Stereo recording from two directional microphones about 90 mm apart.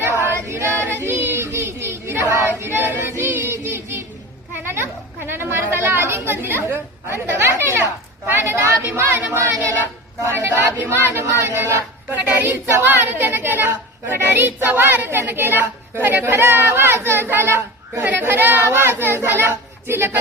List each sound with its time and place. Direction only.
0.0 s child singing: 25° right (ahead or behind)
4.5 s chatter: 25° right (ahead or behind)
8.3 s a sound: 25° right (ahead or behind)
9.4 s speech: 30° right (ahead or behind)